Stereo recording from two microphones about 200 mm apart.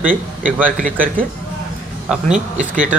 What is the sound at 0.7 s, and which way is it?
Speech, 40° right (ahead or behind).